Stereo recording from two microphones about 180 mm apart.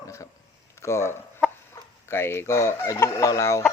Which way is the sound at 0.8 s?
15° left (ahead or behind).